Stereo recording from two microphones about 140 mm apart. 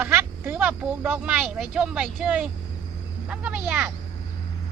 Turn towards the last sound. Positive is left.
turn(degrees=-10)  # may be behind; listen again after turning